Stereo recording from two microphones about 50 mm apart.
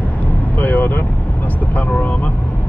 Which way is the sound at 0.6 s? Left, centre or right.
Left.